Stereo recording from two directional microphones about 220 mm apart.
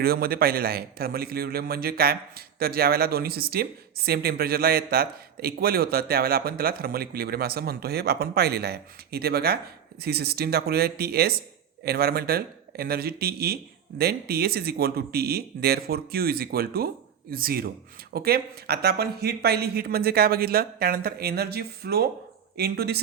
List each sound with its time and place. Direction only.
0.0 s a man's voice: 45° right (ahead or behind)